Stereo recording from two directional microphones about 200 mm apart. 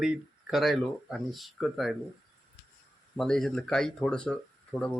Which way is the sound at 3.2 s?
Centre (ahead or behind).